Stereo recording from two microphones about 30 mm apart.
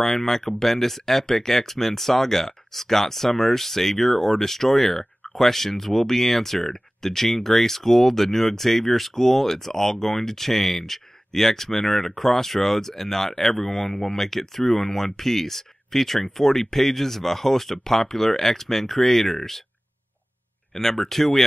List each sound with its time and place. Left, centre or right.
0.0 s speech: centre
20.7 s speech: centre
21.0 s speech: centre